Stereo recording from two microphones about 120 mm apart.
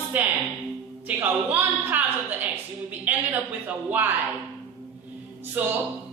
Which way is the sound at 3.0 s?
15° right (ahead or behind).